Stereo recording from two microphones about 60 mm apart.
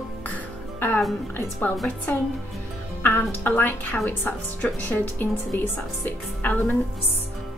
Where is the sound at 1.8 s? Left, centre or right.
Left.